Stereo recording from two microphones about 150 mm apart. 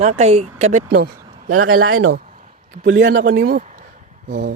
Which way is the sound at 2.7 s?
60° right (ahead or behind).